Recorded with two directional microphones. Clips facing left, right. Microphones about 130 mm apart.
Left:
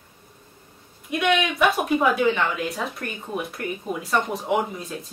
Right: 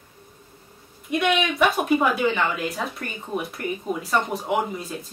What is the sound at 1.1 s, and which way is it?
A woman's voice, centre (ahead or behind).